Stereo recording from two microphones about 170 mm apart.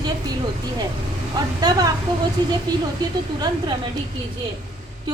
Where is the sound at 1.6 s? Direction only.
20° right (ahead or behind).